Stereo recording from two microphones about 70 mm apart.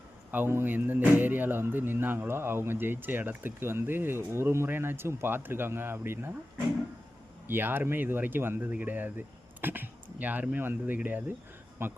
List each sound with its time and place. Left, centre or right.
0.3 s a man's voice: right
7.4 s speech: right
11.8 s speech: right